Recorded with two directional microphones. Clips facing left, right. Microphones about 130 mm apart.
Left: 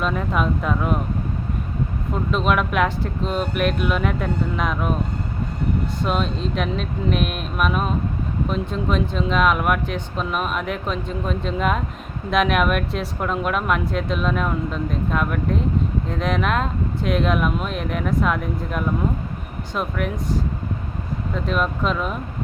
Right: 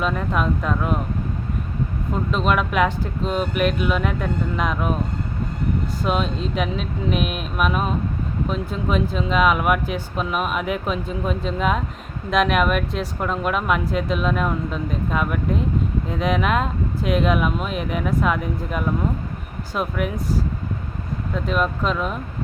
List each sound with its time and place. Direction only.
0.0 s speech: centre (ahead or behind)
2.1 s speech: centre (ahead or behind)
6.0 s speech: centre (ahead or behind)
21.3 s speech: centre (ahead or behind)